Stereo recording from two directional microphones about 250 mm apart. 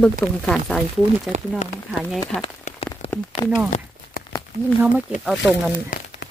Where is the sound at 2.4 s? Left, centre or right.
Left.